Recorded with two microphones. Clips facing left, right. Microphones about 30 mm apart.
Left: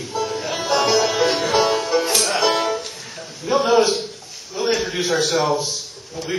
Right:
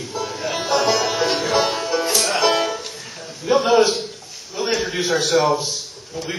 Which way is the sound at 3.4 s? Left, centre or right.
Centre.